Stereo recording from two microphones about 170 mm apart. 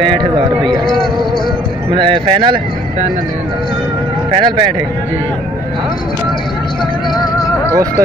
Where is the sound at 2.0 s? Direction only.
30° right (ahead or behind).